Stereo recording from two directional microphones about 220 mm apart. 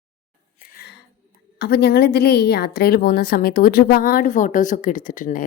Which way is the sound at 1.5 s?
45° left (ahead or behind).